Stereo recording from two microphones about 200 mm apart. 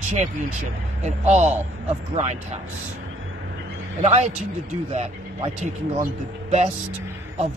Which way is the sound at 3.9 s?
35° right (ahead or behind).